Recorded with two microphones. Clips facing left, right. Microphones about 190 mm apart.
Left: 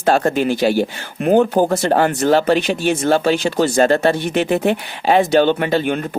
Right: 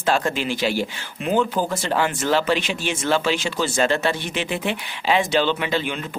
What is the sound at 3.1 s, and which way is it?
Speech, 50° left (ahead or behind).